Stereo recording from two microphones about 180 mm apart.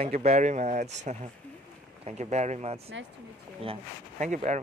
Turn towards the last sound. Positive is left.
turn(degrees=-40)  # may be behind; listen again after turning